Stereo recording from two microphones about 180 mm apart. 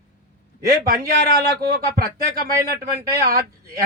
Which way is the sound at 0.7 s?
60° right (ahead or behind).